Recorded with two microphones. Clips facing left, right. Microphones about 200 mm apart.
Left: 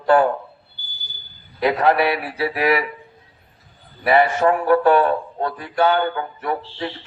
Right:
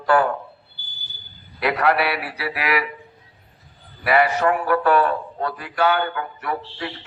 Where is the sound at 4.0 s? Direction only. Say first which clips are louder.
Left 2 dB; 30° left (ahead or behind).